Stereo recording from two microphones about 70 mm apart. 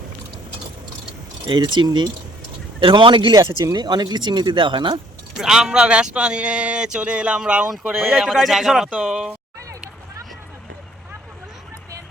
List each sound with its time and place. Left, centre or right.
1.5 s speech: right
3.2 s speech: right
3.6 s speech: right
5.4 s speech: centre